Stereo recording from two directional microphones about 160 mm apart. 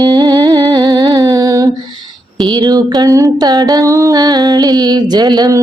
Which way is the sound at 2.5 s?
20° right (ahead or behind).